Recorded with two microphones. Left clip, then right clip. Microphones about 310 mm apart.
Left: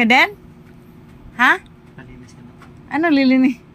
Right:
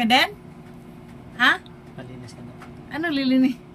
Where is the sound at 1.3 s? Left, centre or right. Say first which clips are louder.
Left 5 dB; centre.